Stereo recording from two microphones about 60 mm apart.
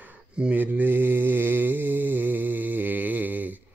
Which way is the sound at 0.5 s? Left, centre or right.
Right.